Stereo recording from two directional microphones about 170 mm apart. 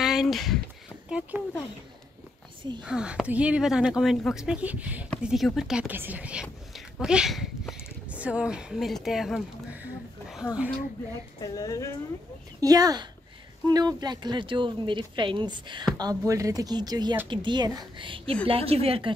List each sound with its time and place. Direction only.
0.0 s a sound: centre (ahead or behind)
1.0 s speech: 5° right (ahead or behind)
2.8 s speech: 5° right (ahead or behind)
11.4 s speech: 20° left (ahead or behind)
12.5 s speech: 20° right (ahead or behind)